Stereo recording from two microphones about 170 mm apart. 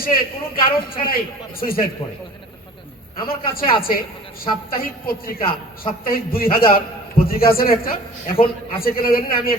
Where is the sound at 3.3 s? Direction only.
60° left (ahead or behind).